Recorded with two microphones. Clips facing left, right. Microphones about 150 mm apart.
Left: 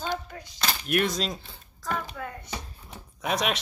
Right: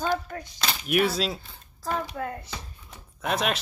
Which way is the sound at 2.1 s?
35° right (ahead or behind).